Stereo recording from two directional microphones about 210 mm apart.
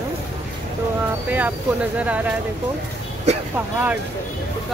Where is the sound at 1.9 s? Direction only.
5° right (ahead or behind).